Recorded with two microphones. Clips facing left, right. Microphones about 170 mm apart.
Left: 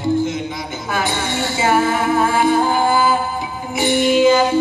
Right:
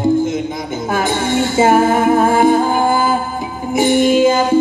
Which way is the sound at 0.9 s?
45° right (ahead or behind).